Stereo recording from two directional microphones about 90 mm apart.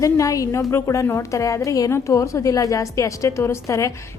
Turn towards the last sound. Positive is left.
turn(degrees=30)  # may be behind; listen again after turning